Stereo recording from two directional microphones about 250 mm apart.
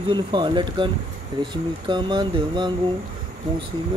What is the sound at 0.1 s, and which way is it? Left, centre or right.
Speech, centre.